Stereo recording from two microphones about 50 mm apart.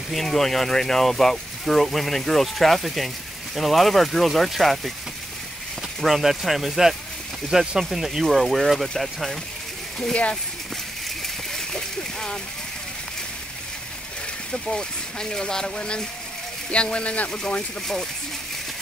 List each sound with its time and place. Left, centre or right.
0.1 s speech: centre
11.2 s a sound: centre
14.5 s speech: centre